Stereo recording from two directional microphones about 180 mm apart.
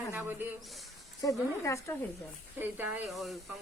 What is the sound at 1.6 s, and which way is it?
Speech, 15° left (ahead or behind).